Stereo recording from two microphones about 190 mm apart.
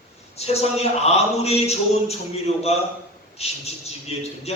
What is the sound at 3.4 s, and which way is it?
Speech, 35° left (ahead or behind).